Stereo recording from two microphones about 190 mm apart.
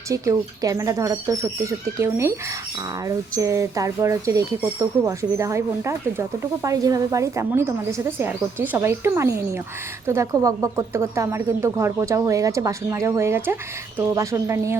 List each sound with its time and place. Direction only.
0.1 s speech: 15° right (ahead or behind)